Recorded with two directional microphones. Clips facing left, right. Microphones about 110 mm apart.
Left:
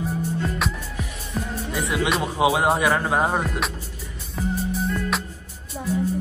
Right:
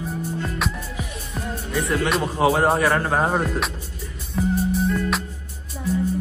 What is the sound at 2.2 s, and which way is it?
Speech, 10° left (ahead or behind).